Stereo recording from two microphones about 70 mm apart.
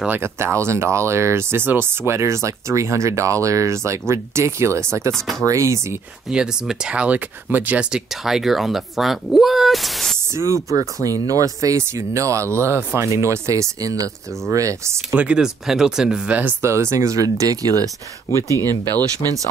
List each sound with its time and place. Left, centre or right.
0.1 s speech: right
5.1 s speech: centre
5.4 s speech: right
6.2 s speech: centre
8.1 s speech: centre
10.3 s speech: right
15.1 s speech: centre
16.6 s speech: right